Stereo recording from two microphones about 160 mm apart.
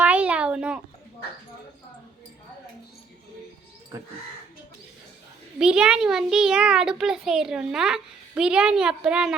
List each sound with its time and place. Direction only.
0.0 s a sound: 10° right (ahead or behind)
3.9 s crow: 20° right (ahead or behind)
5.5 s a child's voice: 5° right (ahead or behind)